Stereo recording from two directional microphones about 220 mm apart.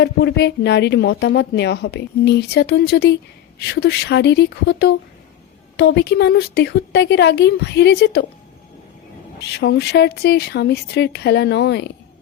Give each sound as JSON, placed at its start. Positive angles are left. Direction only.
{"t": 0.0, "sound": "speech", "side_deg": 50}
{"t": 9.4, "sound": "speech", "side_deg": 50}